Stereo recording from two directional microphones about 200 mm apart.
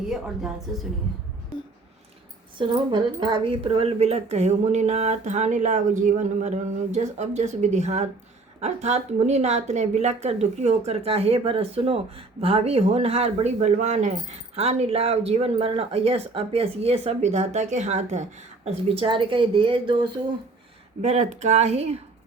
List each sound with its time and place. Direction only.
0.1 s a woman's voice: 5° right (ahead or behind)
2.6 s speech: 25° right (ahead or behind)
21.0 s speech: 35° right (ahead or behind)